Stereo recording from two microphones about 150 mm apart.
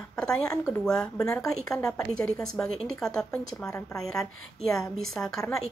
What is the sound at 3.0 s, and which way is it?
Speech, 5° left (ahead or behind).